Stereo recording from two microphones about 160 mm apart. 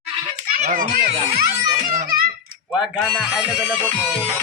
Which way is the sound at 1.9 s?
55° right (ahead or behind).